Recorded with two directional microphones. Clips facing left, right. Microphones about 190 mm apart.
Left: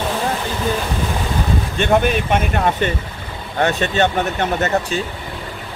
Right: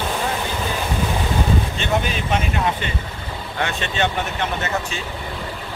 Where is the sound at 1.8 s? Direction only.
55° left (ahead or behind).